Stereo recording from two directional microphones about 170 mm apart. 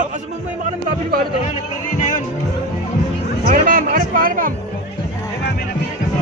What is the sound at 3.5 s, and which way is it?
Music, 55° right (ahead or behind).